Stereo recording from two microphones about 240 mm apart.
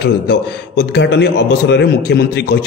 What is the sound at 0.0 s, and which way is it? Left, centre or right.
A man's voice, left.